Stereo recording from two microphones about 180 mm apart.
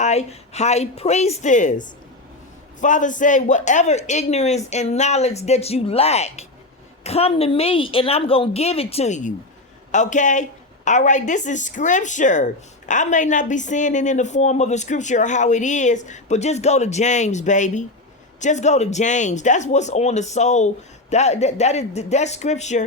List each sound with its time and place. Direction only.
0.0 s a man's voice: 40° left (ahead or behind)